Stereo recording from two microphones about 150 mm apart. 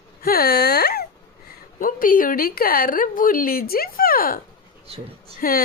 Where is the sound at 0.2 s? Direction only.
90° left.